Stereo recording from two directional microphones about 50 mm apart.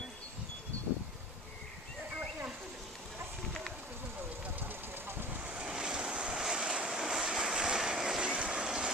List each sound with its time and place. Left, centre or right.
4.6 s engine: right
5.4 s waves: right
8.6 s vehicle: centre